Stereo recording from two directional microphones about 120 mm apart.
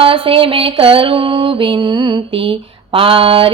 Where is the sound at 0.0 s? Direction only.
50° right (ahead or behind).